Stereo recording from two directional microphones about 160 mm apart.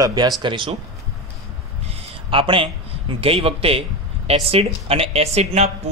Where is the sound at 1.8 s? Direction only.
40° right (ahead or behind).